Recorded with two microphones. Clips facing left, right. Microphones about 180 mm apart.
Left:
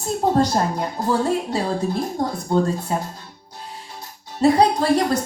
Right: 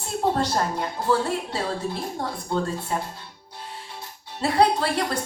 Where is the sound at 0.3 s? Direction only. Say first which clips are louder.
Left 5 dB; 40° left (ahead or behind).